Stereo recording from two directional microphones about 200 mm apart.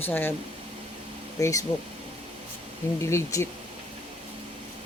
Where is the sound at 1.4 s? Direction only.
15° left (ahead or behind).